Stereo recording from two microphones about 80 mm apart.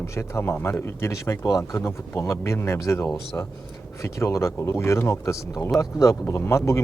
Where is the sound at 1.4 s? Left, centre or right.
Left.